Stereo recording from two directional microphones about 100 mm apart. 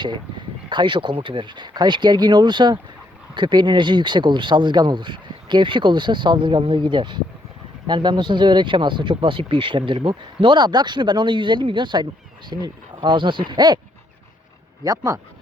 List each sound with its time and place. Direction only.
0.7 s speech: 50° right (ahead or behind)
14.8 s speech: 35° right (ahead or behind)